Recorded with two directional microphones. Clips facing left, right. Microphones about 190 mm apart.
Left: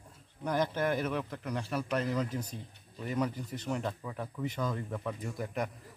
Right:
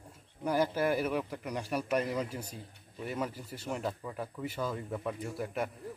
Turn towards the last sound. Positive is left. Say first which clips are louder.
# right 1 dB
turn(degrees=-5)  # may be behind; listen again after turning